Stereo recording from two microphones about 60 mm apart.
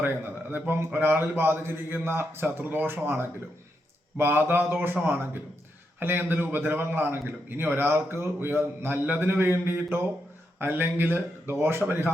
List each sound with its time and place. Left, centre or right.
0.9 s a man's voice: right